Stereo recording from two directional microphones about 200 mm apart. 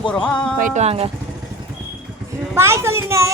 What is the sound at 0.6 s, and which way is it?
Speech, 35° right (ahead or behind).